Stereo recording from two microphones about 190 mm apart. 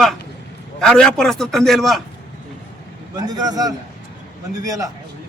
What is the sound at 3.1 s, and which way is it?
A man's voice, 20° right (ahead or behind).